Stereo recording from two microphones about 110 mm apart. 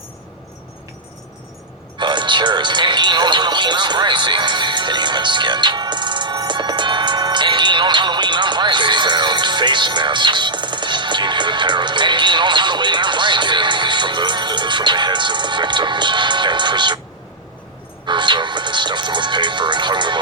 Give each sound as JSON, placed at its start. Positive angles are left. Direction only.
{"t": 2.0, "sound": "speech", "side_deg": -45}
{"t": 18.0, "sound": "speech", "side_deg": -45}